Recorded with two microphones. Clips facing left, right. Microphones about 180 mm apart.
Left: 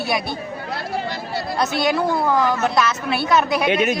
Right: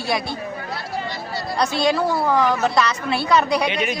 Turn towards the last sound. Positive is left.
turn(degrees=50)  # may be behind; listen again after turning